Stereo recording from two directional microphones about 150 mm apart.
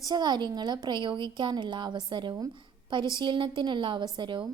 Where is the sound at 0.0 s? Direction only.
30° right (ahead or behind).